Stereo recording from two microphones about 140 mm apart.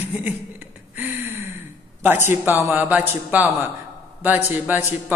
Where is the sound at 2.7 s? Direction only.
10° right (ahead or behind).